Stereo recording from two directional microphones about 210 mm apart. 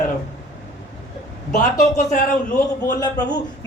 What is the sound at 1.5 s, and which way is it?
Speech, 40° left (ahead or behind).